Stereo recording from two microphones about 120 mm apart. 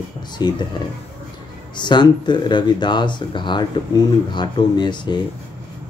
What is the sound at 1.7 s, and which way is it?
Speech, 40° left (ahead or behind).